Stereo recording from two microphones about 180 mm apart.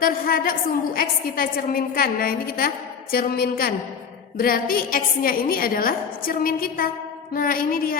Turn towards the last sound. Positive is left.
turn(degrees=50)  # may be behind; listen again after turning